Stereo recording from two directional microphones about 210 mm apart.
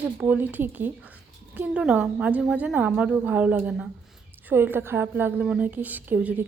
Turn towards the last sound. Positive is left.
turn(degrees=-10)  # may be behind; listen again after turning